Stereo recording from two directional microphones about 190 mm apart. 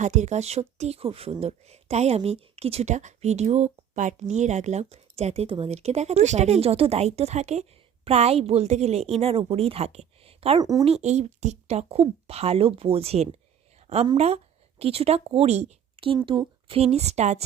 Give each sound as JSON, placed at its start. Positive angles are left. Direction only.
{"t": 0.0, "sound": "speech", "side_deg": -40}
{"t": 10.6, "sound": "speech", "side_deg": -20}
{"t": 10.8, "sound": "a woman's voice", "side_deg": -35}